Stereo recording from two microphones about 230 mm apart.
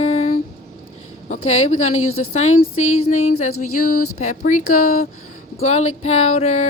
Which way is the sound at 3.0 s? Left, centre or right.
Left.